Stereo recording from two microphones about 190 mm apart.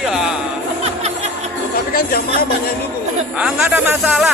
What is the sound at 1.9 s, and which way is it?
Chatter, 50° left (ahead or behind).